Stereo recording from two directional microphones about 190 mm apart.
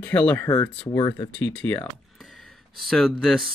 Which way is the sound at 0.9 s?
25° left (ahead or behind).